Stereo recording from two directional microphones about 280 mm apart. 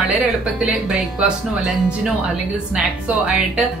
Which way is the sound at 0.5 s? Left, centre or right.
Centre.